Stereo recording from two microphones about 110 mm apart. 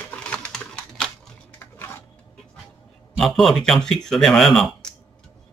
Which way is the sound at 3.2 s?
Centre (ahead or behind).